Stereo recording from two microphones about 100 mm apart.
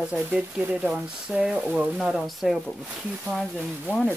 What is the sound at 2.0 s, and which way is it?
Speech, centre (ahead or behind).